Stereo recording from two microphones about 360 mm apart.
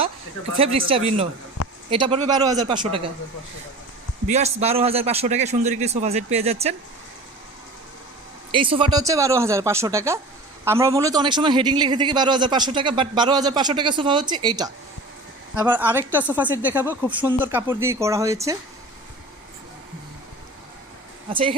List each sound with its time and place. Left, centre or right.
0.5 s a man's voice: centre
4.3 s a man's voice: centre
8.5 s a man's voice: centre
21.2 s speech: centre